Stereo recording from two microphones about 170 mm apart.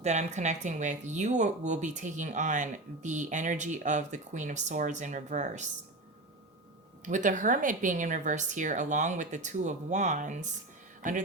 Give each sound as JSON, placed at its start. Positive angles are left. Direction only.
{"t": 0.0, "sound": "speech", "side_deg": -45}
{"t": 7.0, "sound": "speech", "side_deg": -45}